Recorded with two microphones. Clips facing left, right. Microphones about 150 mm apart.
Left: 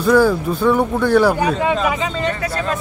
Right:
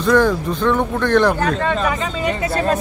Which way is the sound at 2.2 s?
20° right (ahead or behind).